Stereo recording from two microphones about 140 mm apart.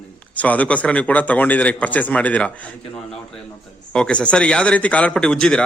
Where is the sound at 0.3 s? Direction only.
10° left (ahead or behind).